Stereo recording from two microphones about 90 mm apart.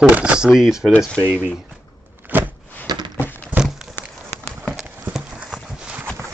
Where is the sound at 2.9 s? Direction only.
45° right (ahead or behind).